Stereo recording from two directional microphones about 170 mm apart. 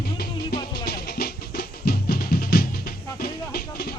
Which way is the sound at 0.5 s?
65° left (ahead or behind).